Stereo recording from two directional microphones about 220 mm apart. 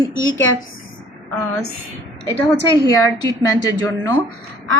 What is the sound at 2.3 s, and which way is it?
A woman's voice, 15° left (ahead or behind).